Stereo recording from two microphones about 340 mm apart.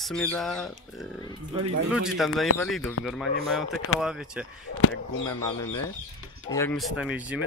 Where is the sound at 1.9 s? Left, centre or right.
Centre.